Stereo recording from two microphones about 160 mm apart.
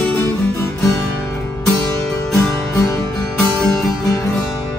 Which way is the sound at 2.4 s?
20° left (ahead or behind).